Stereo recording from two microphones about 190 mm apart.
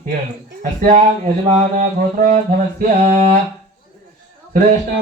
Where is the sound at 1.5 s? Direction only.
40° right (ahead or behind).